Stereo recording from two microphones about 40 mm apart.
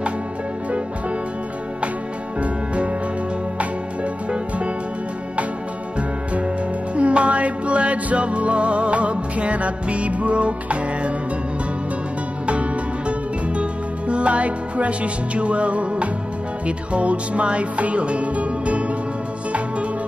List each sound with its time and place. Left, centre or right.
2.4 s music: right
7.0 s music: right
13.5 s music: right